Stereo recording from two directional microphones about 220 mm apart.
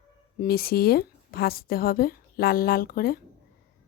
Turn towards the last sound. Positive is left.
turn(degrees=40)  # may be behind; listen again after turning